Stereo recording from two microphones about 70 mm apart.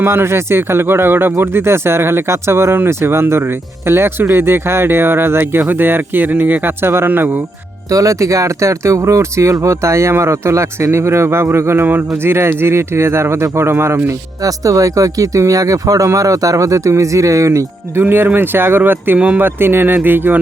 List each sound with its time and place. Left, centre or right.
0.0 s speech: right
7.9 s speech: right
14.4 s speech: right
18.3 s speech: right